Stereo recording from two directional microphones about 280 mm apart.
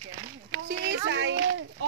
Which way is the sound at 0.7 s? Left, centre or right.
Right.